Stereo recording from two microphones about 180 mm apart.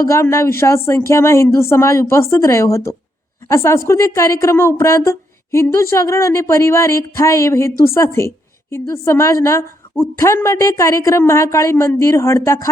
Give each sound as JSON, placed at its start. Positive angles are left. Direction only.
{"t": 0.0, "sound": "a woman's voice", "side_deg": 15}